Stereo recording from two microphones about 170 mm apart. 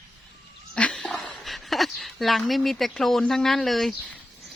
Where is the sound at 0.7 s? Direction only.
5° left (ahead or behind).